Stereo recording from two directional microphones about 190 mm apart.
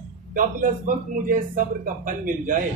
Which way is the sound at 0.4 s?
45° right (ahead or behind).